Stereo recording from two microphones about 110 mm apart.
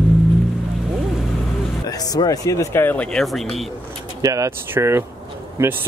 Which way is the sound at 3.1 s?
5° left (ahead or behind).